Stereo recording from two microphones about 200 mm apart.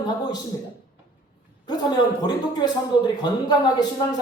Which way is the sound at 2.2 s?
20° left (ahead or behind).